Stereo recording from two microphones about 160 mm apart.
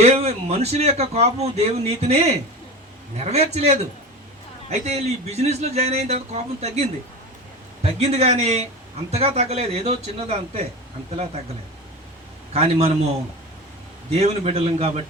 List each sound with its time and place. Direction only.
0.0 s a man's voice: 40° right (ahead or behind)
12.5 s a man's voice: 40° right (ahead or behind)
14.1 s a man's voice: 40° right (ahead or behind)